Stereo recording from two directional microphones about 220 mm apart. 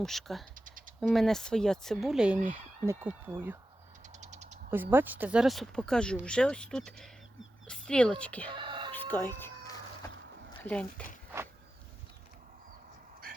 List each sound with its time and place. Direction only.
0.0 s speech: centre (ahead or behind)
0.5 s typing: 40° right (ahead or behind)
0.9 s speech: centre (ahead or behind)
4.2 s a sound: 30° right (ahead or behind)
4.7 s speech: 10° right (ahead or behind); by 8.4 s 5° left (ahead or behind)
8.4 s whispering: 20° right (ahead or behind)
8.9 s chicken: 10° left (ahead or behind)
10.6 s speech: 5° left (ahead or behind)